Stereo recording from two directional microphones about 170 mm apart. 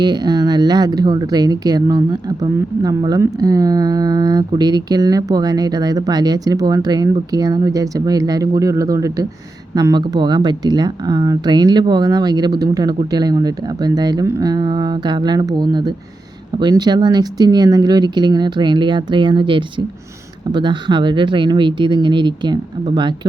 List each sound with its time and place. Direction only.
0.0 s speech: 25° right (ahead or behind)